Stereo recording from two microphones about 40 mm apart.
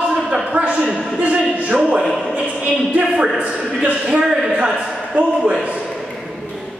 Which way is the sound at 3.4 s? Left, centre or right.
Right.